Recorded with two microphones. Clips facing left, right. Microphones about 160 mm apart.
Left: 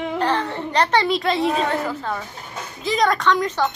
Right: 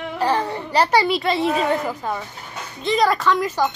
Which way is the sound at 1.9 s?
10° right (ahead or behind).